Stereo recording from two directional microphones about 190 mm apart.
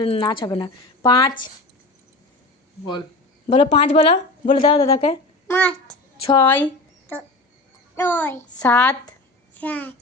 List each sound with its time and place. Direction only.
0.0 s speech: 25° left (ahead or behind)
3.5 s speech: 35° left (ahead or behind)
5.5 s a child's voice: 10° left (ahead or behind)
6.2 s speech: 25° left (ahead or behind)
7.9 s a child's voice: 10° left (ahead or behind)